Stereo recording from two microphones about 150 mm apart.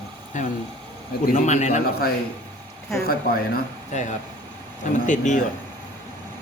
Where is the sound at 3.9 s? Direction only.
50° left (ahead or behind).